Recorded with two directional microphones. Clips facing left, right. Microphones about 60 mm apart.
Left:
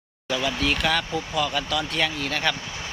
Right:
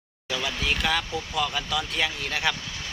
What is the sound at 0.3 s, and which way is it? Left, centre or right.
Speech, centre.